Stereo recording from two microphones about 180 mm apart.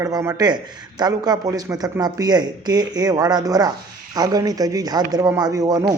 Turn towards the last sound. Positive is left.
turn(degrees=-20)  # may be behind; listen again after turning